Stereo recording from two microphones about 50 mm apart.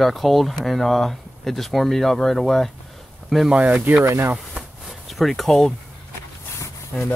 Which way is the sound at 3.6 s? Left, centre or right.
Right.